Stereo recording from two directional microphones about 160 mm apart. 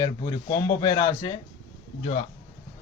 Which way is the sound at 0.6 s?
25° left (ahead or behind).